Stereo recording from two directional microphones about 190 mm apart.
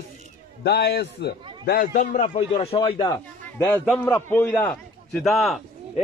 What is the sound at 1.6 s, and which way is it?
Speech, 45° left (ahead or behind).